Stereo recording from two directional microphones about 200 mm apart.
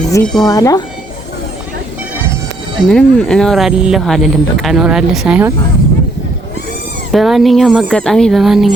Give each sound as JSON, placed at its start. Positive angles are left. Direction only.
{"t": 0.1, "sound": "speech", "side_deg": 5}
{"t": 2.8, "sound": "speech", "side_deg": 5}
{"t": 7.1, "sound": "speech", "side_deg": 0}